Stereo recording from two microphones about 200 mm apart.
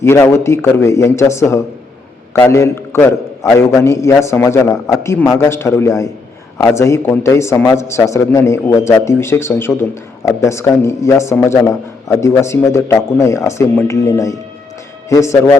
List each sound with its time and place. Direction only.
0.0 s a man's voice: 15° left (ahead or behind)